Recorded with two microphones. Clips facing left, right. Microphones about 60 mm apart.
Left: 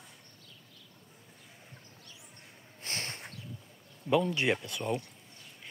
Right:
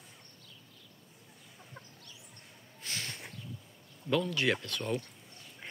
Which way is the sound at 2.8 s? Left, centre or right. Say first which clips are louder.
Left 1 dB; left.